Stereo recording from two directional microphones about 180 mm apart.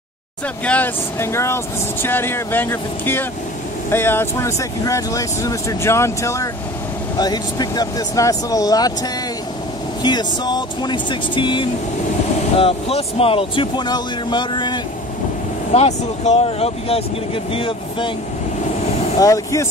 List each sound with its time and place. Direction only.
0.7 s speech: 10° left (ahead or behind)
10.0 s speech: 25° left (ahead or behind)
15.7 s speech: 35° left (ahead or behind)
19.1 s speech: 20° left (ahead or behind)